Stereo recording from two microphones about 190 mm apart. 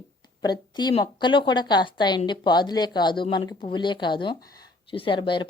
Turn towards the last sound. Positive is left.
turn(degrees=25)  # may be behind; listen again after turning